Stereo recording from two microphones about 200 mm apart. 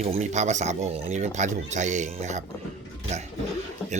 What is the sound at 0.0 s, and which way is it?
Speech, 35° right (ahead or behind).